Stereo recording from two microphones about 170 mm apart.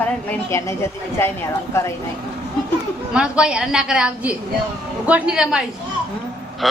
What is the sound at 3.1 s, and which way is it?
A woman's voice, 5° right (ahead or behind).